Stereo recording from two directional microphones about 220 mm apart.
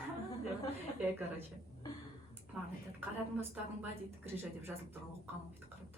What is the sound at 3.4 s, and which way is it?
A woman's voice, 10° right (ahead or behind).